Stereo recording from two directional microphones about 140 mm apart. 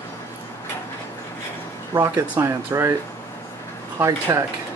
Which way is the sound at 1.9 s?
20° right (ahead or behind).